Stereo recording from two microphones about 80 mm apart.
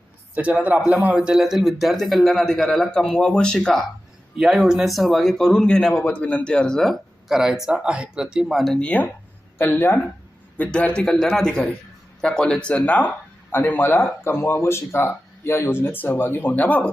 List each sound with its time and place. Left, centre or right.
0.3 s a man's voice: centre
7.3 s speech: centre
8.8 s a man's voice: centre